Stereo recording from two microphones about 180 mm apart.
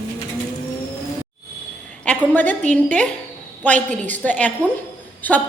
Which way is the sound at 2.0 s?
10° left (ahead or behind).